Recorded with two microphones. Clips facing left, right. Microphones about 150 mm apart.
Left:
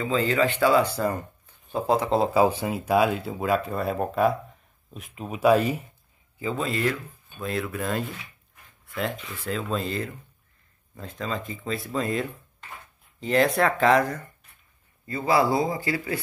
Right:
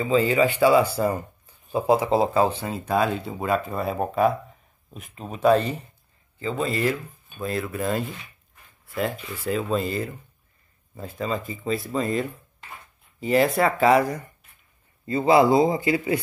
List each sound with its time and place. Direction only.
0.0 s speech: 10° right (ahead or behind)
2.3 s speech: 10° left (ahead or behind); by 14.3 s 10° right (ahead or behind)
15.0 s speech: 25° right (ahead or behind)